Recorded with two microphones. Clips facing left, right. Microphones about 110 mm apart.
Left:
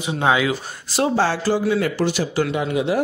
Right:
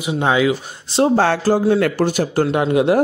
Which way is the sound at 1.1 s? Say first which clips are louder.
Right 3 dB; 55° right (ahead or behind).